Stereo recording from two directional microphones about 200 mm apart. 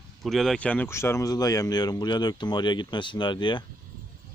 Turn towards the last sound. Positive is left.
turn(degrees=25)  # may be behind; listen again after turning